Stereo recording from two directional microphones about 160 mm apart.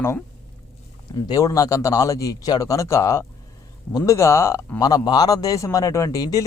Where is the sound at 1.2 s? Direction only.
20° left (ahead or behind).